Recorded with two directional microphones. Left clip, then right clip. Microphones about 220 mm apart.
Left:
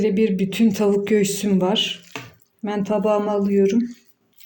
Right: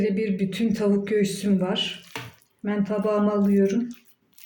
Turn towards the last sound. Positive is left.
turn(degrees=30)  # may be behind; listen again after turning